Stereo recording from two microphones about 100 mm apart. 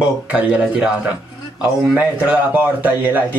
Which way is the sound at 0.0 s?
10° right (ahead or behind).